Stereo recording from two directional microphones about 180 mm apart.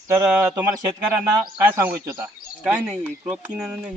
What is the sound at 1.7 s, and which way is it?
Speech, 10° right (ahead or behind).